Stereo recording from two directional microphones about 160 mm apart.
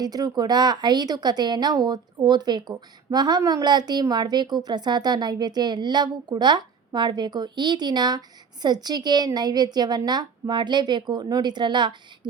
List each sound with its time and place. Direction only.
0.0 s a woman's voice: 25° right (ahead or behind)